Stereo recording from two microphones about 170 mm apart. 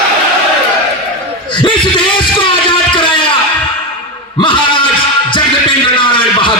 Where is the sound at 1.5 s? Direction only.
30° left (ahead or behind).